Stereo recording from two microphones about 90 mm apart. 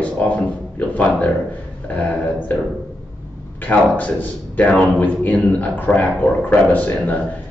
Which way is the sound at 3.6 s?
20° left (ahead or behind).